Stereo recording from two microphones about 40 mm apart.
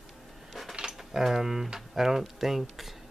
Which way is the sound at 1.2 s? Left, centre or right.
Centre.